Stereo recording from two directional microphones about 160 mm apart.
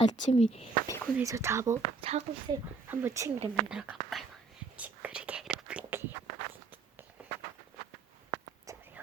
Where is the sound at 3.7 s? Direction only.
5° right (ahead or behind).